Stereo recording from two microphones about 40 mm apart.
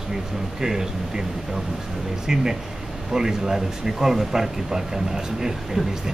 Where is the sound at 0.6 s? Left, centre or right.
Centre.